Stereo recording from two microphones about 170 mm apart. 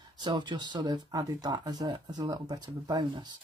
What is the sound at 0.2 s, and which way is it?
Speech, 25° right (ahead or behind).